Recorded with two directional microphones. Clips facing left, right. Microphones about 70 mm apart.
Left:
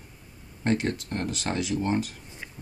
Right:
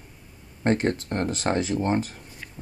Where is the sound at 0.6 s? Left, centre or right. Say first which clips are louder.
Right 3 dB; right.